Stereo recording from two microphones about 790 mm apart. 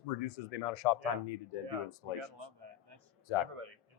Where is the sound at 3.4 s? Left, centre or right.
Right.